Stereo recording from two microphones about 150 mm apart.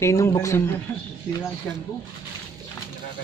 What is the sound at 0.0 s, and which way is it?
Speech, 20° left (ahead or behind).